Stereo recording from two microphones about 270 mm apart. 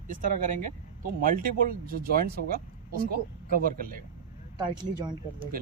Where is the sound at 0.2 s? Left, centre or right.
Right.